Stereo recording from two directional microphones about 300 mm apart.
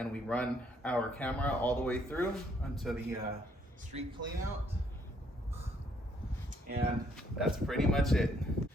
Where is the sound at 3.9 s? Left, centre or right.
Centre.